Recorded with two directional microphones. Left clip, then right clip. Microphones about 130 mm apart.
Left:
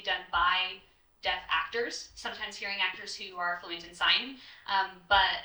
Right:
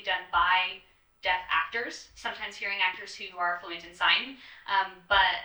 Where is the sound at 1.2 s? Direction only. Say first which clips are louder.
Right 3 dB; 25° left (ahead or behind).